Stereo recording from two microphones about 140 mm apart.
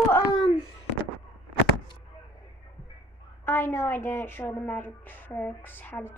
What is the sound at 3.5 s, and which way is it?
A woman's voice, 15° left (ahead or behind).